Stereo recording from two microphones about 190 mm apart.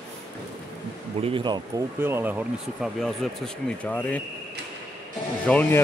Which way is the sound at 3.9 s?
10° left (ahead or behind).